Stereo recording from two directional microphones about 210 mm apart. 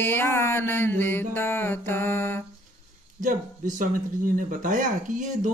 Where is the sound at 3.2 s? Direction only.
40° right (ahead or behind).